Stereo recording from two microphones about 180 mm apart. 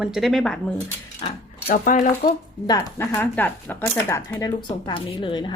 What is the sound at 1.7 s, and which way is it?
Speech, 50° left (ahead or behind).